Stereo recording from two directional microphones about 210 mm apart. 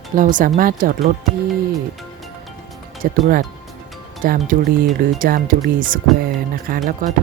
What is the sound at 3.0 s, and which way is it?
Speech, 45° right (ahead or behind).